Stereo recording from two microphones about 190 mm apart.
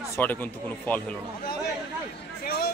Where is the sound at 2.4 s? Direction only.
55° left (ahead or behind).